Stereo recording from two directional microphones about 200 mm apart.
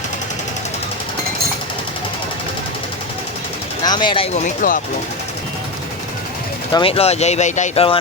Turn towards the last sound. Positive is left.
turn(degrees=30)  # may be behind; listen again after turning